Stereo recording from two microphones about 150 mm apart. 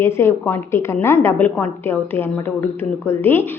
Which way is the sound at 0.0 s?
15° left (ahead or behind).